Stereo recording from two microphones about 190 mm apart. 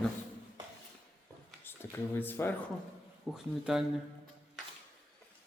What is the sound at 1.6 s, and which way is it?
Speech, 10° left (ahead or behind).